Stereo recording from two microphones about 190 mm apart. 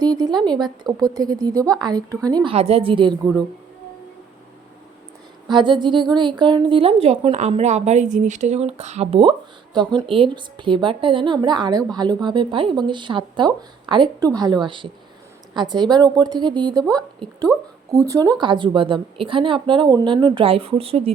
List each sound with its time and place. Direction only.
0.0 s a woman's voice: 20° right (ahead or behind)
5.5 s a woman's voice: 25° right (ahead or behind)